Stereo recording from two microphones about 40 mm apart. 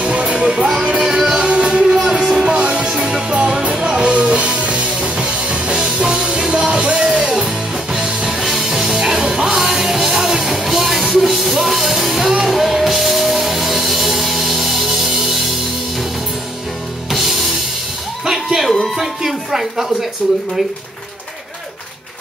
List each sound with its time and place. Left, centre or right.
0.0 s music: right
0.9 s music: centre
2.3 s music: right
8.4 s music: centre
17.1 s music: centre
18.2 s music: centre
18.9 s a sound: centre